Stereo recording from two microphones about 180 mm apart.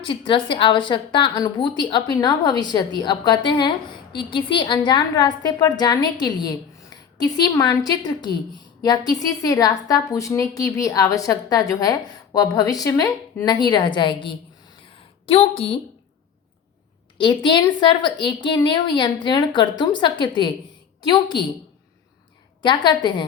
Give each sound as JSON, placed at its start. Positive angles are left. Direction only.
{"t": 0.0, "sound": "a woman's voice", "side_deg": 30}
{"t": 17.2, "sound": "a woman's voice", "side_deg": 25}
{"t": 22.6, "sound": "a woman's voice", "side_deg": 25}